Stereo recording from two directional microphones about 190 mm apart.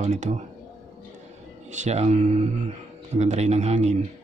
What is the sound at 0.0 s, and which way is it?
Speech, 40° right (ahead or behind).